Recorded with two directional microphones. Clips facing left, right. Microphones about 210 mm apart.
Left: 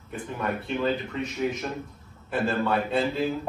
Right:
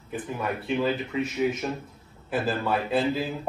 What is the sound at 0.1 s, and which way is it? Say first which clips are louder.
Speech: even; 5° right (ahead or behind).